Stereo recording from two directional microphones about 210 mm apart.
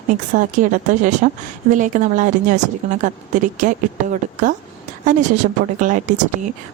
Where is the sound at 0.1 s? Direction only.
35° right (ahead or behind).